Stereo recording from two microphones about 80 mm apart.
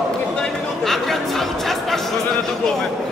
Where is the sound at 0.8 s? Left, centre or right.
Centre.